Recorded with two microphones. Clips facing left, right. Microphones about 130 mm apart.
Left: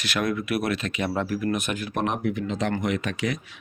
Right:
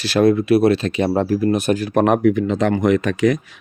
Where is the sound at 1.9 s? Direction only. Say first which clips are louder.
Right 11 dB; 55° right (ahead or behind).